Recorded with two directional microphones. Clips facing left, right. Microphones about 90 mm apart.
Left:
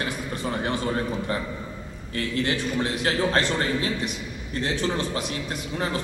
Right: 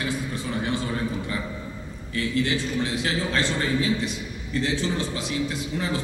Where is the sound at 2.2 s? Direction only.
45° left (ahead or behind).